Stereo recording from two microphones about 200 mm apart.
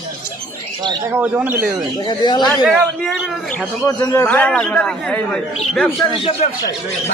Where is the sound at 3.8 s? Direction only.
15° left (ahead or behind).